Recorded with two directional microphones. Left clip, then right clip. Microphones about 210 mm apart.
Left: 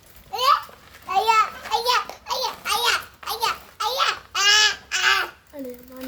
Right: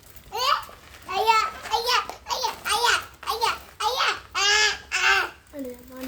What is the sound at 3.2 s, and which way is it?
Babbling, 45° left (ahead or behind).